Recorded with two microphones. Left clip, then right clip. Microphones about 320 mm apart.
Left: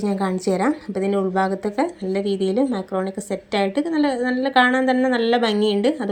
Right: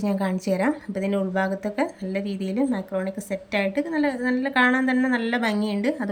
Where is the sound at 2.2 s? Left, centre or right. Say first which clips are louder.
Left 9 dB; centre.